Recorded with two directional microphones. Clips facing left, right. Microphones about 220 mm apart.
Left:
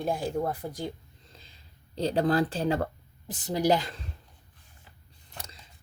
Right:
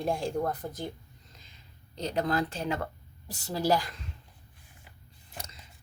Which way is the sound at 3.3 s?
20° left (ahead or behind).